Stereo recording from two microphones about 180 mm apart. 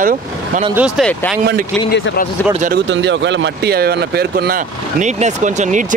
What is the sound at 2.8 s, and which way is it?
Speech, 85° right.